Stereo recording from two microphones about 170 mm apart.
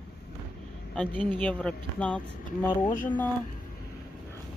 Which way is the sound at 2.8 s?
50° left (ahead or behind).